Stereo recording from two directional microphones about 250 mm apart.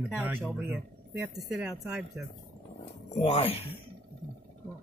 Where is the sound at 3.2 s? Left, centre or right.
Left.